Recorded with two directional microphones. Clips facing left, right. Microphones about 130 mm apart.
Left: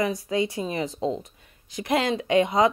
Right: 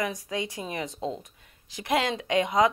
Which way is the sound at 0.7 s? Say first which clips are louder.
Left 4 dB; 30° left (ahead or behind).